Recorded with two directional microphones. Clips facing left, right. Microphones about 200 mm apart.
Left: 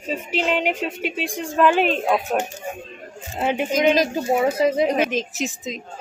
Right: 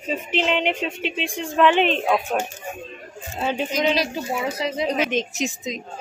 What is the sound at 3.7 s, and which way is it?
Speech, 50° left (ahead or behind).